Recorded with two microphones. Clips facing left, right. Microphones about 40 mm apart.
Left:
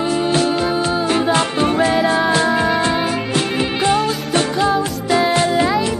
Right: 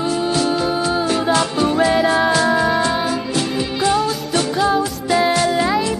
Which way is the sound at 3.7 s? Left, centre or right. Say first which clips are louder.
Even; left.